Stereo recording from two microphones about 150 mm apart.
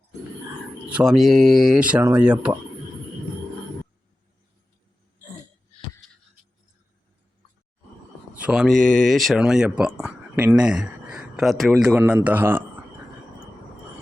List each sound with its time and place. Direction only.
0.9 s speech: centre (ahead or behind)
8.4 s speech: 5° right (ahead or behind)